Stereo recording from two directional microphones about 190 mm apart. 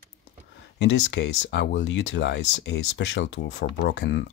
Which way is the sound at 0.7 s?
75° left (ahead or behind).